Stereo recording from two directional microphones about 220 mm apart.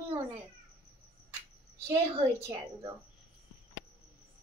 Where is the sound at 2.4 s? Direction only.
15° right (ahead or behind).